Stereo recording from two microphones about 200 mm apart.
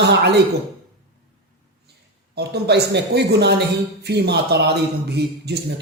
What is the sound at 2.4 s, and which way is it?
A man's voice, 55° right (ahead or behind).